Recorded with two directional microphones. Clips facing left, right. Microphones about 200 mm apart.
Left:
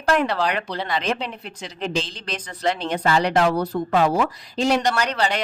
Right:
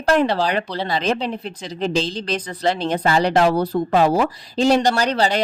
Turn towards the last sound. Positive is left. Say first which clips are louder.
# right 4 dB
turn(degrees=-35)  # may be behind; listen again after turning